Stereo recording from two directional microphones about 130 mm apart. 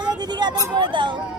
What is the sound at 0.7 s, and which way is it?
Speech, 35° right (ahead or behind).